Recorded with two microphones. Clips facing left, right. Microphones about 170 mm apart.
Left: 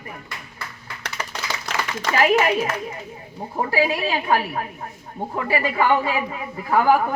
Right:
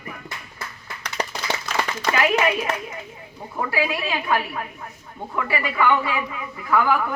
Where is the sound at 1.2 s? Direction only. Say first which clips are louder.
Right 6 dB; 35° right (ahead or behind).